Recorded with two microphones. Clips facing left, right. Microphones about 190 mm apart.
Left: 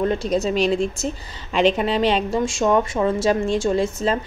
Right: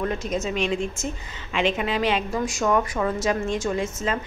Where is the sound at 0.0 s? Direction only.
30° left (ahead or behind).